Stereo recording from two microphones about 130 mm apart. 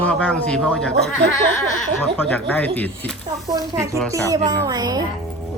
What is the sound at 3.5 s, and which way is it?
A woman's voice, 25° right (ahead or behind).